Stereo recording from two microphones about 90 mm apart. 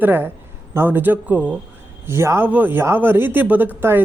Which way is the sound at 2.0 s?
30° right (ahead or behind).